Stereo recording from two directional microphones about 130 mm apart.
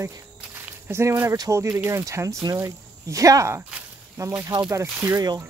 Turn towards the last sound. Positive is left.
turn(degrees=-20)  # may be behind; listen again after turning